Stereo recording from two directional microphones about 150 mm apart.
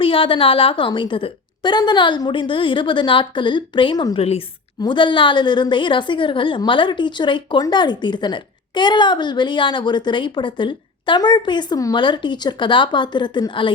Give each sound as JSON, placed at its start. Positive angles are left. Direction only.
{"t": 0.0, "sound": "a woman's voice", "side_deg": 35}
{"t": 4.2, "sound": "a woman's voice", "side_deg": 40}